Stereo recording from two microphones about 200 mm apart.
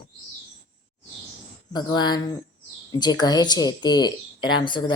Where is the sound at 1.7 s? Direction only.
20° left (ahead or behind).